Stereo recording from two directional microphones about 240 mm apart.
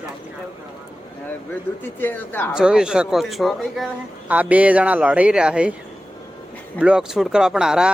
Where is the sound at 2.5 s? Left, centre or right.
Centre.